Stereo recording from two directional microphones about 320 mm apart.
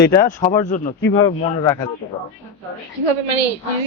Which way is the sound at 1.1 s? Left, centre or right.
Centre.